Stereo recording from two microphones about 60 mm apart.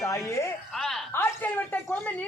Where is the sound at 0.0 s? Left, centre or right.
Left.